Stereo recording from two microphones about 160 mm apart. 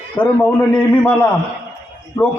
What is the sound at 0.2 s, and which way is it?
A man's voice, 10° left (ahead or behind).